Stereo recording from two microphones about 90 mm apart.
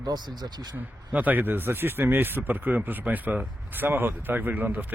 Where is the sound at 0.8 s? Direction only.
20° right (ahead or behind).